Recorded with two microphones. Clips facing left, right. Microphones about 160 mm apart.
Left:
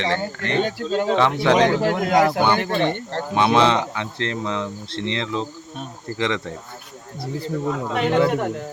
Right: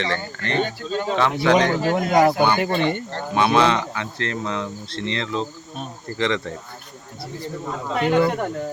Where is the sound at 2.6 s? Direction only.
5° right (ahead or behind).